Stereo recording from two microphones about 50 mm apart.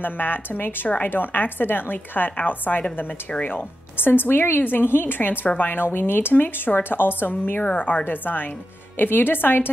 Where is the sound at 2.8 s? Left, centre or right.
Left.